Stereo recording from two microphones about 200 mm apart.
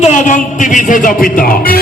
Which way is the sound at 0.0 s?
40° left (ahead or behind).